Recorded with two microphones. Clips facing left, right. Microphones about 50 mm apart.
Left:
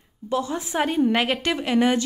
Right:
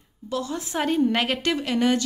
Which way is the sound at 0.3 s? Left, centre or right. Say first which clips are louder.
Left 3 dB; left.